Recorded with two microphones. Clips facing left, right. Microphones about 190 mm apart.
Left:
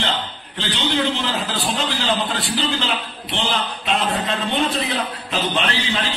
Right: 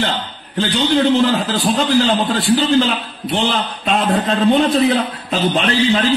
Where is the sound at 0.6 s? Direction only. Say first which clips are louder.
Right 7 dB; 45° right (ahead or behind).